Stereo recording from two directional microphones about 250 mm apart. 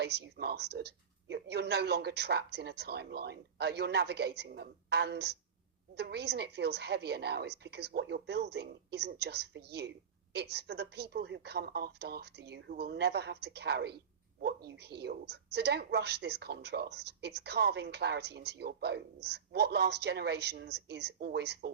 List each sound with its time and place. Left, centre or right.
0.0 s a woman's voice: right